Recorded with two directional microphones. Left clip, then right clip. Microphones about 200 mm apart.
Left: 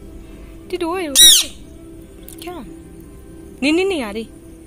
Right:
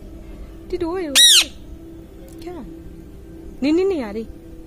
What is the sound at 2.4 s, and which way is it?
Speech, 5° left (ahead or behind).